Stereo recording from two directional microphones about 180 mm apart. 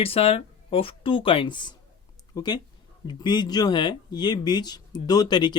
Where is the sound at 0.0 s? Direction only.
30° left (ahead or behind).